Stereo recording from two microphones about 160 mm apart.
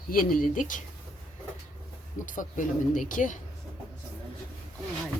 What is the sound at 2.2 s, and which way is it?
Speech, 55° left (ahead or behind).